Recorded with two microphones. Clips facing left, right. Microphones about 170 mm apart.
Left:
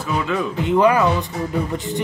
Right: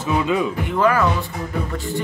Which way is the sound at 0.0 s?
20° right (ahead or behind).